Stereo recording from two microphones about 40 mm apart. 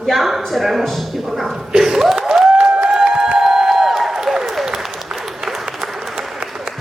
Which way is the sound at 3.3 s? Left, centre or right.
Centre.